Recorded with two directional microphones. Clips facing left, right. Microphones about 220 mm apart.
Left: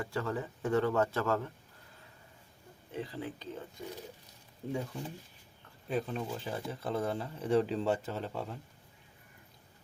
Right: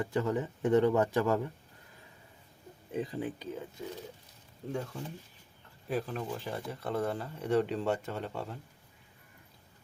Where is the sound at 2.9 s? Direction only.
20° right (ahead or behind).